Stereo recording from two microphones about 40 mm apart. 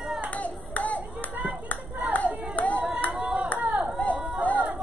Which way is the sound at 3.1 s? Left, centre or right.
Right.